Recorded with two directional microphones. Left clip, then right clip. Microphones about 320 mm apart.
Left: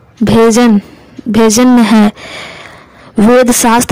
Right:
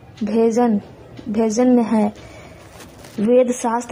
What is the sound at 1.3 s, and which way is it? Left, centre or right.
Speech, left.